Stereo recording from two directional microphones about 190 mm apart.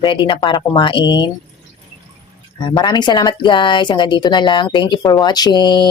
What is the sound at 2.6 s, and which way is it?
Speech, 25° left (ahead or behind).